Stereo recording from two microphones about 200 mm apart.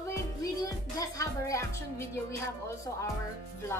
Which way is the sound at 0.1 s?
15° left (ahead or behind).